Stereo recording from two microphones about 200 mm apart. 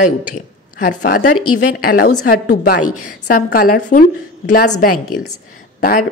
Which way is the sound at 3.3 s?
45° left (ahead or behind).